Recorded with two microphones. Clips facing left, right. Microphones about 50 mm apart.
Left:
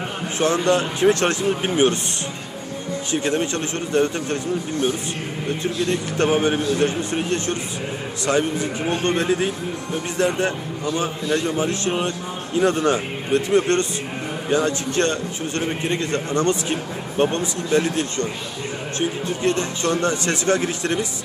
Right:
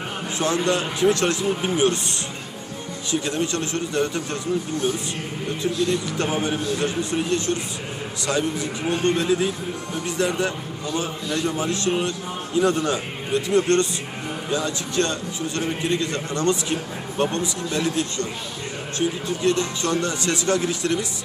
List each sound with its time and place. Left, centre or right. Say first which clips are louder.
0.3 s speech: left 3 dB; left
3.1 s speech: left 2 dB; left
5.9 s speech: left 4 dB; left